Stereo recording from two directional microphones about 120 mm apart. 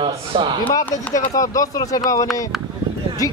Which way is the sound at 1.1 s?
30° left (ahead or behind).